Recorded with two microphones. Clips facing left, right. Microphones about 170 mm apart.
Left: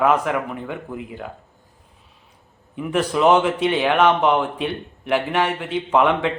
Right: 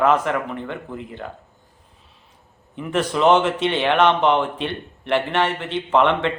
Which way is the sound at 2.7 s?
5° left (ahead or behind).